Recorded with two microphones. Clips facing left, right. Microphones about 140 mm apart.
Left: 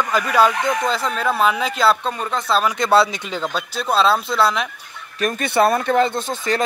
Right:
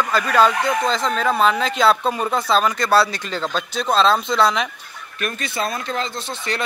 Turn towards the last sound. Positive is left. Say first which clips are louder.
# left 5 dB
turn(degrees=45)  # may be behind; listen again after turning